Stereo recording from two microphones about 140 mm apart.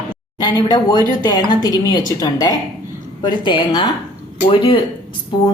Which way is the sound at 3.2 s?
30° left (ahead or behind).